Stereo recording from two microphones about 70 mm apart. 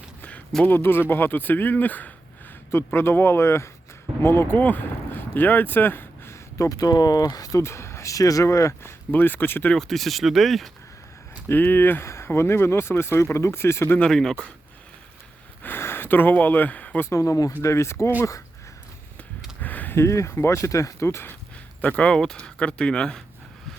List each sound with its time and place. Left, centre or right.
0.2 s a sound: left
0.6 s speech: left
2.7 s speech: left
6.7 s speech: left
7.6 s speech: left
9.7 s speech: centre
11.4 s speech: left
12.0 s speech: left
14.0 s speech: centre
15.6 s speech: left
17.1 s speech: left
19.6 s a sound: left
20.0 s speech: left
21.8 s speech: left